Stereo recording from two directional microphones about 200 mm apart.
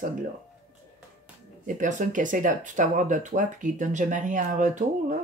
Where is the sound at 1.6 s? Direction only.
40° right (ahead or behind).